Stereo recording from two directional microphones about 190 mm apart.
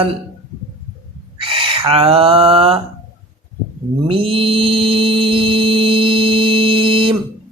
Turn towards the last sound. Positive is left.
turn(degrees=-30)  # may be behind; listen again after turning